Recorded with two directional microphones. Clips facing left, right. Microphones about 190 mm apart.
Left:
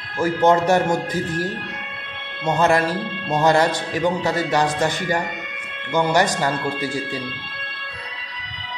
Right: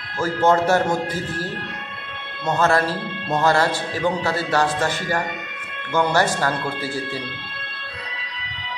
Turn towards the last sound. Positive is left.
turn(degrees=15)  # may be behind; listen again after turning